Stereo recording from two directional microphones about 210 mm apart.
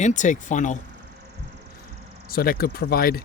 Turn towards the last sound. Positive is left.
turn(degrees=45)  # may be behind; listen again after turning